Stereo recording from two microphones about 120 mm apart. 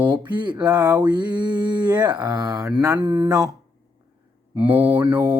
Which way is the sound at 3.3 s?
30° right (ahead or behind).